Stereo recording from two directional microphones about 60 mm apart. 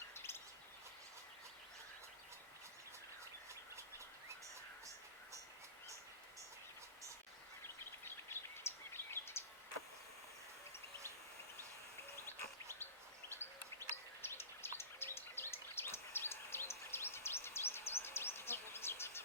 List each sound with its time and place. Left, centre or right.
0.1 s bird: left
3.5 s a sound: right
8.0 s bird: left
13.4 s bird: left